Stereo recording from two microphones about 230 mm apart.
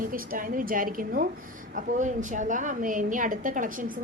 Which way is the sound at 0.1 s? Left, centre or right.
Right.